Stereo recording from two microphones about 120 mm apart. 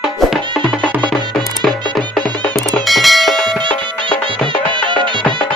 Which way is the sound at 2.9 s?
Centre (ahead or behind).